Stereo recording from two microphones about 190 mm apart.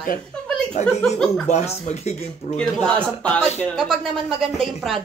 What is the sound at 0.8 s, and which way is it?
Speech, 40° left (ahead or behind).